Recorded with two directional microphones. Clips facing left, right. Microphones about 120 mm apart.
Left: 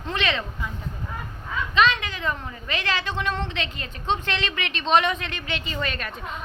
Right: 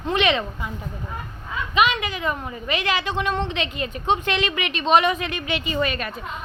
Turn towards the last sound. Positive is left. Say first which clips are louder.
# right 5 dB
turn(degrees=-5)  # may be behind; listen again after turning